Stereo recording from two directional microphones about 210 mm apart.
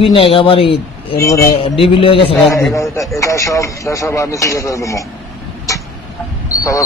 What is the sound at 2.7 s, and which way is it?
A man's voice, 15° left (ahead or behind).